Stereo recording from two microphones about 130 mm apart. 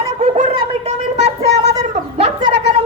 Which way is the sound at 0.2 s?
60° right (ahead or behind).